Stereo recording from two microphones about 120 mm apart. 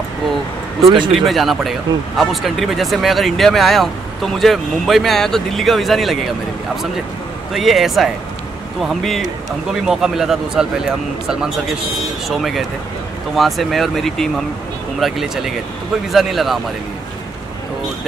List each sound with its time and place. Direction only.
0.8 s speech: 40° right (ahead or behind)
1.1 s speech: centre (ahead or behind)
7.5 s speech: centre (ahead or behind)
12.3 s speech: centre (ahead or behind)